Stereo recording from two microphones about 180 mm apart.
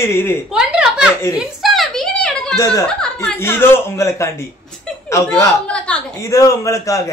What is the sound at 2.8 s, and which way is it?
A man's voice, 5° left (ahead or behind).